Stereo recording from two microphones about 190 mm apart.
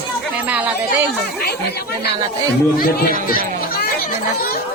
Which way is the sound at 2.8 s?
50° left (ahead or behind).